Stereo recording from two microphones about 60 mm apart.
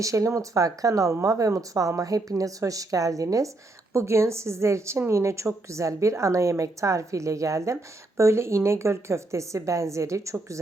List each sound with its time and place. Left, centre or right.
0.0 s speech: right
3.9 s a woman's voice: right